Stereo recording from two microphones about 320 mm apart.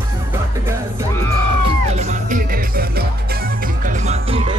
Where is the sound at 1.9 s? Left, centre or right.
Right.